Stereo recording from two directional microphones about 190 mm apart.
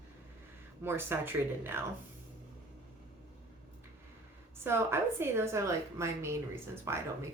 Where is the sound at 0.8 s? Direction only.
10° right (ahead or behind).